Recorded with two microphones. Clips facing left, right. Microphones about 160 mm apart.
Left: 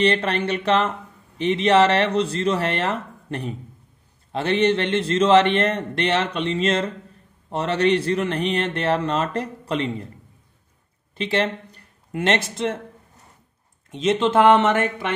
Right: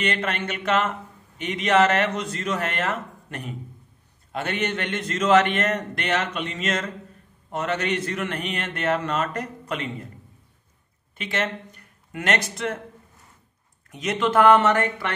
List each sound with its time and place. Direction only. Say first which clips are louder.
0.0 s a man's voice: left 6 dB; 35° left (ahead or behind)
11.1 s speech: left 5 dB; 30° left (ahead or behind)
13.8 s a man's voice: left 4 dB; 25° left (ahead or behind)